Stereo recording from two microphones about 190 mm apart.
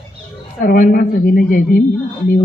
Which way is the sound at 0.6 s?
45° left (ahead or behind).